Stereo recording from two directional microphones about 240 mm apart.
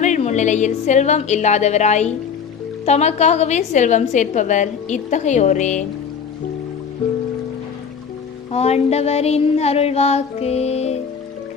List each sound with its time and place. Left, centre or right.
0.0 s a woman's voice: left
8.5 s a woman's voice: left